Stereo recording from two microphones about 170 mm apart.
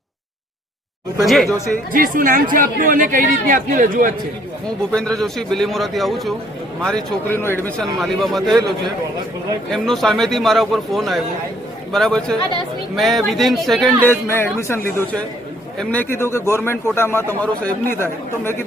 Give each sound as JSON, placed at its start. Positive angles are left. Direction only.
{"t": 1.2, "sound": "a man's voice", "side_deg": 0}
{"t": 1.9, "sound": "speech", "side_deg": -55}
{"t": 4.9, "sound": "a man's voice", "side_deg": 5}
{"t": 7.8, "sound": "a man's voice", "side_deg": 0}
{"t": 9.7, "sound": "a man's voice", "side_deg": 0}
{"t": 15.8, "sound": "a man's voice", "side_deg": 10}